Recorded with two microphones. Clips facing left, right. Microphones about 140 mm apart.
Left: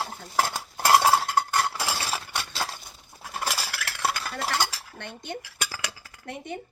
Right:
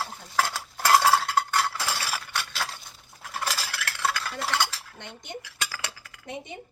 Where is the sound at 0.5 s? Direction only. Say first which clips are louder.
Left 1 dB; 25° left (ahead or behind).